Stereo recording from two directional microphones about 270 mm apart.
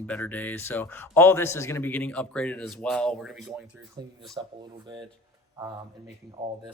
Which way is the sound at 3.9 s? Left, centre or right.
Centre.